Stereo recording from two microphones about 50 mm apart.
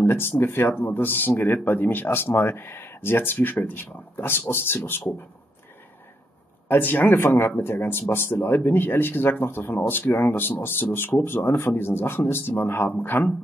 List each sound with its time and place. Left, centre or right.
0.0 s speech: left
6.7 s speech: left